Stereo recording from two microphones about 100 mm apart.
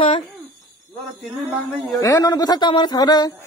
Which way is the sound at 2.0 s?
35° left (ahead or behind).